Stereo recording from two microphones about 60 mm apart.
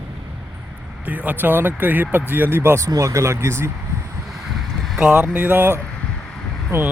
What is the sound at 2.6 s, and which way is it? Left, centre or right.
Speech, right.